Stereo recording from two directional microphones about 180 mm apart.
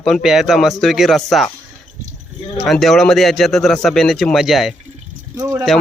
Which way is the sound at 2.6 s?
Centre (ahead or behind).